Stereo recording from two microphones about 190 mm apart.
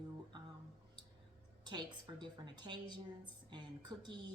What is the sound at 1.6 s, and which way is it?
A woman's voice, 20° right (ahead or behind).